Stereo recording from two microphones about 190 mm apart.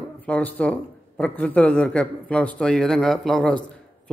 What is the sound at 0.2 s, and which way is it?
Speech, 10° left (ahead or behind).